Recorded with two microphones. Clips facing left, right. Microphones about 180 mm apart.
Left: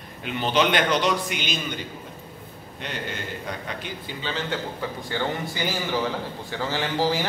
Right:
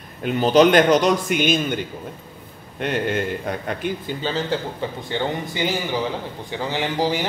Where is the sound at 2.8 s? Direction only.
55° right (ahead or behind).